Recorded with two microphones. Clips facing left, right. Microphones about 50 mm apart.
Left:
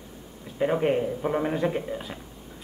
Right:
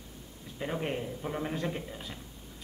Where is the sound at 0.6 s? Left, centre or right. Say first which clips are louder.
Left 11 dB; left.